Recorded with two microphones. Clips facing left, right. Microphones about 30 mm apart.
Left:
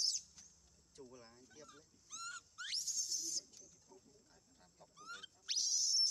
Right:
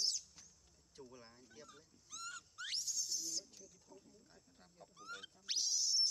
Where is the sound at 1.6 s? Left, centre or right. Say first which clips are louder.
Even; centre.